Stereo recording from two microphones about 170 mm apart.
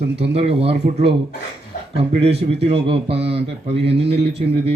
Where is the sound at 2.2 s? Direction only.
35° right (ahead or behind).